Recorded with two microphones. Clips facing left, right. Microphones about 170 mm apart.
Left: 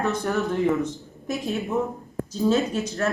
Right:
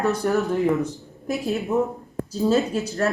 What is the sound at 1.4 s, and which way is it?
Speech, centre (ahead or behind).